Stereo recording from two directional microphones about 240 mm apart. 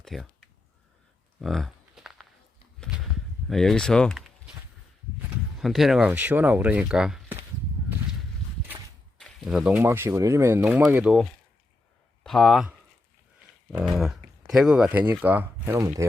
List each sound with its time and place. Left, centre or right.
0.0 s a sound: centre
3.5 s speech: centre
5.5 s speech: centre
9.1 s speech: centre
13.9 s speech: centre